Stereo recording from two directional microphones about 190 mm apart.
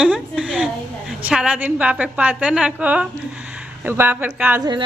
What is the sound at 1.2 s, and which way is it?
A woman's voice, 5° right (ahead or behind).